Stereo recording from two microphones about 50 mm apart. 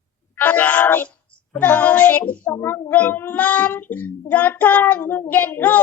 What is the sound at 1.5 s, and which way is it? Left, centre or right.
Child singing, left.